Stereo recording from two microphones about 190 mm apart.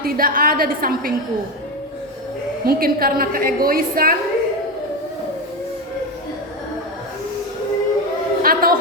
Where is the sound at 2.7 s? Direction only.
50° right (ahead or behind).